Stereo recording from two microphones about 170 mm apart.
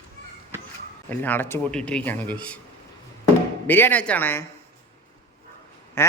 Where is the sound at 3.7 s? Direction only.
10° left (ahead or behind).